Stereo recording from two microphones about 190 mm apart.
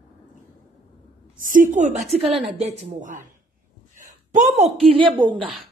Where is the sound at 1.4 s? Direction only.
40° right (ahead or behind).